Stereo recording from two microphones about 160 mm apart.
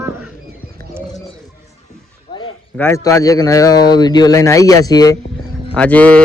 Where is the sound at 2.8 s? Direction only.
15° left (ahead or behind).